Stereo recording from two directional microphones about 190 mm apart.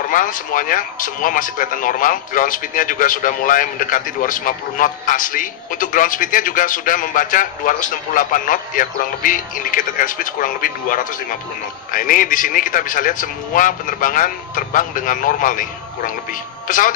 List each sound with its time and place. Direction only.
0.1 s speech: 45° left (ahead or behind)
16.6 s a man's voice: 45° left (ahead or behind)